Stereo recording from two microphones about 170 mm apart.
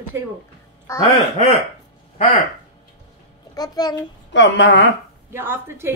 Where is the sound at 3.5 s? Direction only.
25° left (ahead or behind).